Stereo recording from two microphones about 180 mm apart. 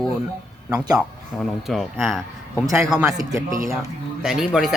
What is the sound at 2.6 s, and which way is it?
Speech, 15° right (ahead or behind).